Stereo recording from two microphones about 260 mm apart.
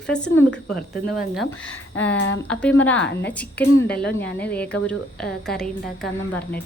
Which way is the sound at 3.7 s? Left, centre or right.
Left.